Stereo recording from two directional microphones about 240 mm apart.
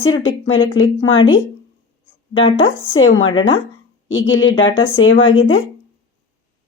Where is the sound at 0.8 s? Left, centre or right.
Left.